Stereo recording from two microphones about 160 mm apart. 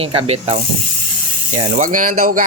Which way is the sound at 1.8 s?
55° right (ahead or behind).